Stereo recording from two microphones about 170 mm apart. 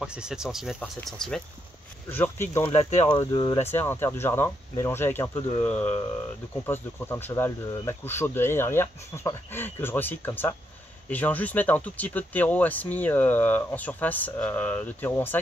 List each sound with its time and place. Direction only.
0.0 s speech: 5° right (ahead or behind); by 2.6 s 15° left (ahead or behind)
2.6 s speech: 40° left (ahead or behind)
3.1 s speech: 25° left (ahead or behind)
3.6 s speech: 15° left (ahead or behind)